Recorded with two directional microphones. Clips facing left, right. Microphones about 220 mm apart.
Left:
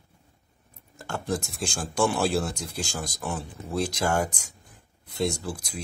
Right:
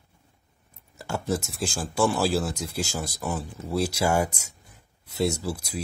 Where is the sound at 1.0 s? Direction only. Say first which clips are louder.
Right 2 dB; 5° right (ahead or behind).